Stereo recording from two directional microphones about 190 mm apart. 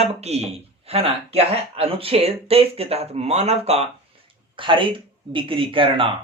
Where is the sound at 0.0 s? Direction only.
35° right (ahead or behind).